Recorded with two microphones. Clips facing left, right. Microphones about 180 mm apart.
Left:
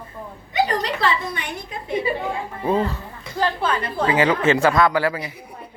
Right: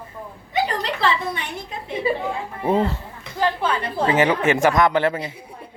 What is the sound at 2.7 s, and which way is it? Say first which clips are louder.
Speech: right 1 dB; 25° right (ahead or behind).